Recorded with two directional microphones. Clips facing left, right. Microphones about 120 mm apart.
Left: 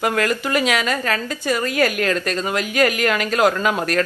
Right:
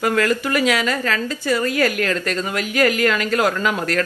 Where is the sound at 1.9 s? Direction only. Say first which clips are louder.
Left 1 dB; 20° left (ahead or behind).